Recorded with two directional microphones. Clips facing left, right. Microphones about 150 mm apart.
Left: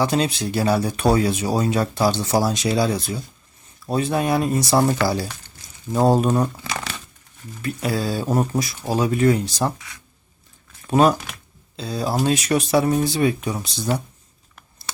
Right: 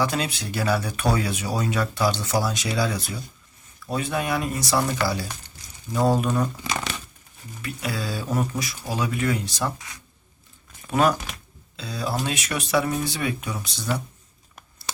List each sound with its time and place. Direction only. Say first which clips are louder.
0.0 s speech: left 5 dB; 30° left (ahead or behind)
6.7 s crumpling: right 1 dB; 20° right (ahead or behind)
7.6 s speech: left 6 dB; 35° left (ahead or behind)
10.9 s speech: left 5 dB; 25° left (ahead or behind)